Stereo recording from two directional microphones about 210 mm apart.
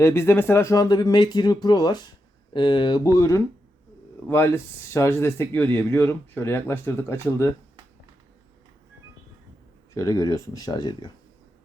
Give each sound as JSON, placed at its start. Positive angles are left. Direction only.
{"t": 0.0, "sound": "speech", "side_deg": 10}
{"t": 9.9, "sound": "speech", "side_deg": 15}